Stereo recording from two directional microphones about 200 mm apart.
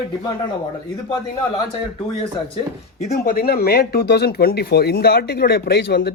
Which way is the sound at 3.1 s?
45° left (ahead or behind).